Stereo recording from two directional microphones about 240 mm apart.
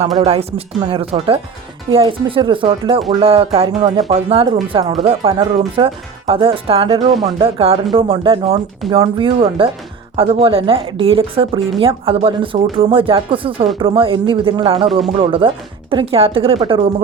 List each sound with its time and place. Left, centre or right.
0.2 s speech: right
14.8 s speech: centre
15.2 s speech: right